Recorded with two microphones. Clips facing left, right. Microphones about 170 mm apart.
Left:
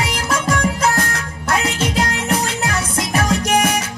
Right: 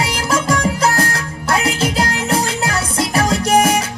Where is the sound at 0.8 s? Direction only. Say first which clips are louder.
Right 2 dB; 35° right (ahead or behind).